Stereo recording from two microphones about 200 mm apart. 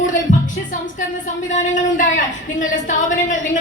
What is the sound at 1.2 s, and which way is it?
Speech, 35° left (ahead or behind).